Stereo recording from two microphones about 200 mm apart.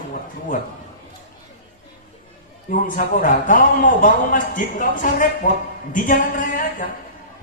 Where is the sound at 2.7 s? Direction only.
40° left (ahead or behind).